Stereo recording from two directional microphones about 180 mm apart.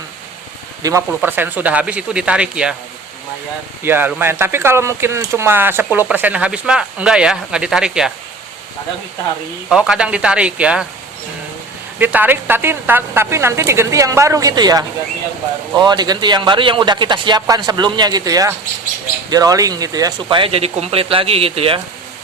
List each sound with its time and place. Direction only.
0.8 s speech: 15° right (ahead or behind)
3.8 s speech: 10° right (ahead or behind)
9.6 s speech: 5° right (ahead or behind)
11.9 s speech: 10° right (ahead or behind); by 21.8 s 30° right (ahead or behind)